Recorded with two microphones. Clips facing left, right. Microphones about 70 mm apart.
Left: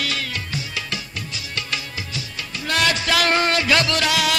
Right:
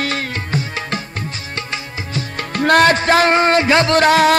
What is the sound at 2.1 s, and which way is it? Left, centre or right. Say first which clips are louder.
Music: right 8 dB; right.